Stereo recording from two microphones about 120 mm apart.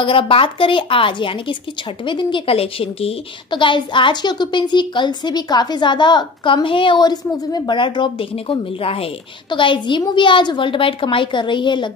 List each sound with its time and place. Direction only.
0.0 s a woman's voice: 45° left (ahead or behind)
3.4 s a woman's voice: 40° left (ahead or behind)